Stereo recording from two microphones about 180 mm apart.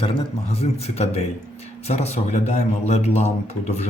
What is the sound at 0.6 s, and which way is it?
Speech, 35° left (ahead or behind).